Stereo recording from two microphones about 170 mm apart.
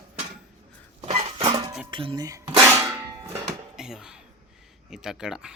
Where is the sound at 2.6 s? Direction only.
15° right (ahead or behind).